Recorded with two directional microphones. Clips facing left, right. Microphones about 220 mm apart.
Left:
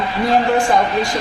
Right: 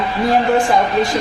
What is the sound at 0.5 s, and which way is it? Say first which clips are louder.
Speech: right 1 dB; 20° right (ahead or behind).